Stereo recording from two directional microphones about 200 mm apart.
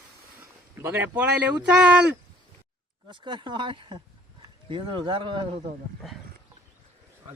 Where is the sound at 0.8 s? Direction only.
10° right (ahead or behind).